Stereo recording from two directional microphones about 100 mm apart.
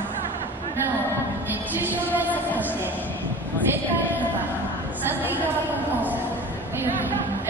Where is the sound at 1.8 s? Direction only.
20° right (ahead or behind).